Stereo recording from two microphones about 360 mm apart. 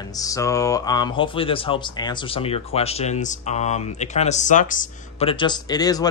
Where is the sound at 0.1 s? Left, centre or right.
Centre.